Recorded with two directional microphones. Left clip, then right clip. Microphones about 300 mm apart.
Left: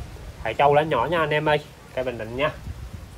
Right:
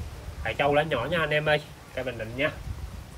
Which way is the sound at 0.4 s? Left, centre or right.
Centre.